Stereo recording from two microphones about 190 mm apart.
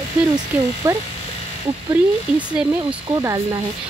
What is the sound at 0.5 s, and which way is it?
Speech, 10° right (ahead or behind).